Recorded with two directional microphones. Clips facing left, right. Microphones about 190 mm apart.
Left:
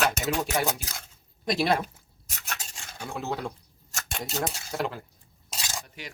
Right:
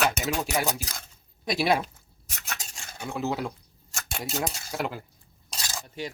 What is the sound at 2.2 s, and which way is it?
Filing, 5° left (ahead or behind).